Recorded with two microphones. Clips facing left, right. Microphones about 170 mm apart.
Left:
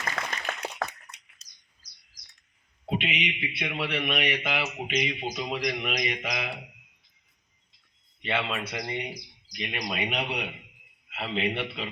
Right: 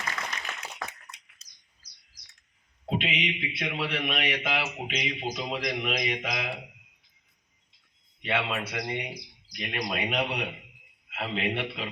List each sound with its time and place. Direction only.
0.3 s a sound: 55° left (ahead or behind)
2.9 s a man's voice: 5° left (ahead or behind)
8.2 s a man's voice: 5° right (ahead or behind)